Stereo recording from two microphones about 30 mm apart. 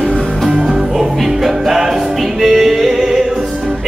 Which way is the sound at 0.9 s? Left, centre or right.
Centre.